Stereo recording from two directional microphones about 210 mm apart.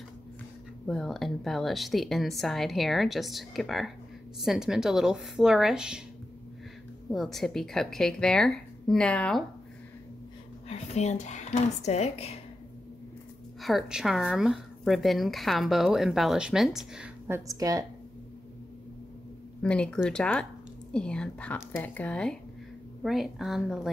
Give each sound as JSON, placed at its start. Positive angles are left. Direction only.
{"t": 0.8, "sound": "speech", "side_deg": 0}
{"t": 7.1, "sound": "speech", "side_deg": 0}
{"t": 10.7, "sound": "speech", "side_deg": 30}
{"t": 13.6, "sound": "speech", "side_deg": 0}
{"t": 17.5, "sound": "a woman's voice", "side_deg": -15}
{"t": 19.6, "sound": "speech", "side_deg": 5}